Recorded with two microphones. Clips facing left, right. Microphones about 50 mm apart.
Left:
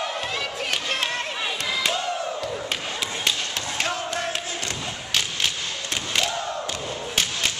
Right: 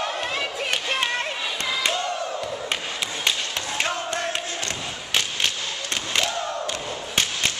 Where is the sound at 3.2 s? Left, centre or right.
Centre.